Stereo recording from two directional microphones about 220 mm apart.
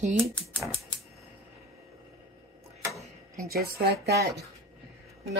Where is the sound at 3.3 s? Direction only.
45° right (ahead or behind).